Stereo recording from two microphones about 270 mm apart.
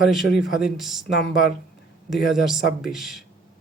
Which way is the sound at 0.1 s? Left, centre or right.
Centre.